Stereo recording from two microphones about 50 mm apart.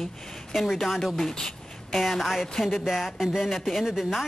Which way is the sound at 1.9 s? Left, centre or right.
Centre.